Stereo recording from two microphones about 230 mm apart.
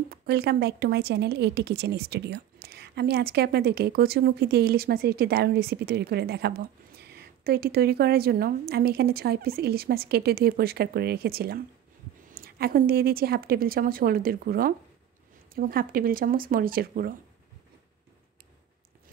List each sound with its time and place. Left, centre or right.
0.1 s a woman's voice: right